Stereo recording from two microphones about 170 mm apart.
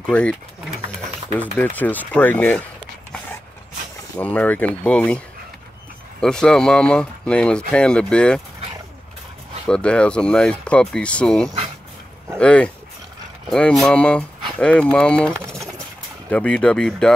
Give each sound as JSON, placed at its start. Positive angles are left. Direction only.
{"t": 0.1, "sound": "speech", "side_deg": 5}
{"t": 4.2, "sound": "speech", "side_deg": 10}
{"t": 6.2, "sound": "speech", "side_deg": 5}
{"t": 9.7, "sound": "speech", "side_deg": 5}
{"t": 15.3, "sound": "pigeon", "side_deg": -15}
{"t": 16.3, "sound": "speech", "side_deg": 5}